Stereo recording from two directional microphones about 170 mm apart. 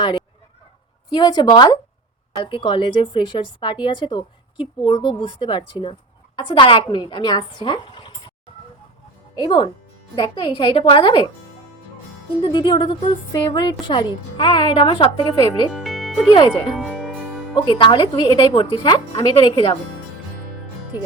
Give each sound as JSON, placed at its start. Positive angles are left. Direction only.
{"t": 1.1, "sound": "speech", "side_deg": 25}
{"t": 9.3, "sound": "speech", "side_deg": 25}
{"t": 12.4, "sound": "speech", "side_deg": 25}
{"t": 15.7, "sound": "music", "side_deg": 0}
{"t": 16.3, "sound": "speech", "side_deg": 30}
{"t": 16.7, "sound": "music", "side_deg": 0}
{"t": 17.7, "sound": "speech", "side_deg": 30}